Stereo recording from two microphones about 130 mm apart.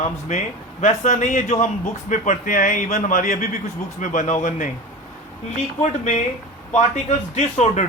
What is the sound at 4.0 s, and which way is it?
Speech, 80° left.